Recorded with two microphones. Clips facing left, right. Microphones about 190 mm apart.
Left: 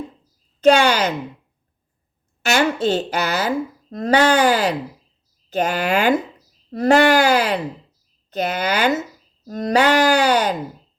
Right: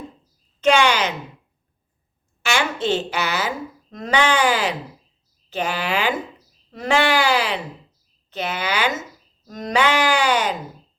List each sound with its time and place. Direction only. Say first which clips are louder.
0.6 s speech: left 3 dB; 35° left (ahead or behind)
2.4 s speech: left 5 dB; 40° left (ahead or behind)